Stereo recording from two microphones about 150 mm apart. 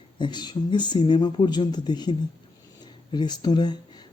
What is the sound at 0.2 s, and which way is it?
Speech, 30° left (ahead or behind).